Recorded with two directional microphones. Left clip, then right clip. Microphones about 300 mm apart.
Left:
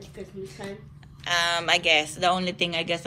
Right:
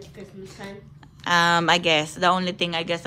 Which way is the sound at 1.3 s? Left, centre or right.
Centre.